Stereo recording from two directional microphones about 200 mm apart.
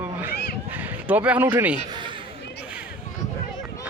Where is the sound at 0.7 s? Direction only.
10° right (ahead or behind).